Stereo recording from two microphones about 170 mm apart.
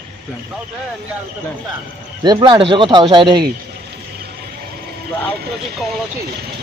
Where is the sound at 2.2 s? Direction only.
25° right (ahead or behind).